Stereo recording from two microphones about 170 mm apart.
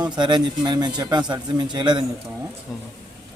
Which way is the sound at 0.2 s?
25° right (ahead or behind).